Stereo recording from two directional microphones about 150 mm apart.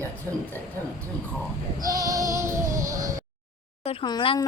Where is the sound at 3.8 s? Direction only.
40° left (ahead or behind).